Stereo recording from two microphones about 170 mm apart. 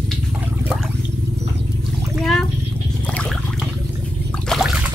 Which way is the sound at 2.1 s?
Centre (ahead or behind).